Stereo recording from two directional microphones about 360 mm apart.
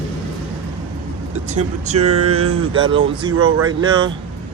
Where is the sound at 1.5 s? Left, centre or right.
Centre.